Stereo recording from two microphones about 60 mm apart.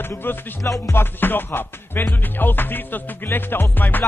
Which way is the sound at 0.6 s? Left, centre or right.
Left.